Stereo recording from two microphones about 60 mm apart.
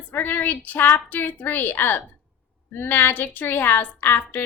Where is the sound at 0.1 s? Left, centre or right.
Left.